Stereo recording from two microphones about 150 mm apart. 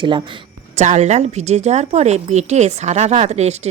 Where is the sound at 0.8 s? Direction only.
50° right (ahead or behind).